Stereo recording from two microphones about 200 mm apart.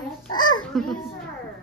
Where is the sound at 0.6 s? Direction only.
Centre (ahead or behind).